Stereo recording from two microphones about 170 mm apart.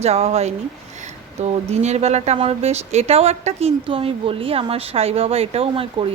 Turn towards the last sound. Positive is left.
turn(degrees=-35)  # may be behind; listen again after turning